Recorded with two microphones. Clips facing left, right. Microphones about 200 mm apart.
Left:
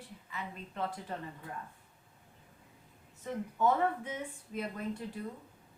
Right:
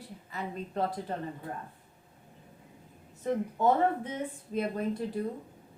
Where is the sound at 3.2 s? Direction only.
35° right (ahead or behind).